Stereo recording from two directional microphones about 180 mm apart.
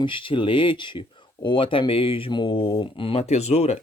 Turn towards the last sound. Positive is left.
turn(degrees=35)  # may be behind; listen again after turning